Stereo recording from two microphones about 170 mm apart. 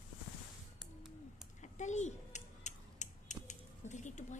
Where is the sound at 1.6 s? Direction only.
45° left (ahead or behind).